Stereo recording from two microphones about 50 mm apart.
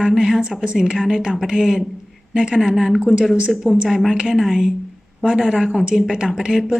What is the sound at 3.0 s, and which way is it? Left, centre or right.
A woman's voice, centre.